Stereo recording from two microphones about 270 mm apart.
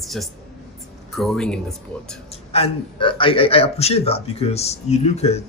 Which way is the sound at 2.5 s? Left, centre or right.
Centre.